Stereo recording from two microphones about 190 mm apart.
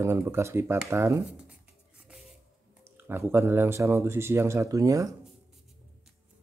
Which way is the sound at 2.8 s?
15° right (ahead or behind).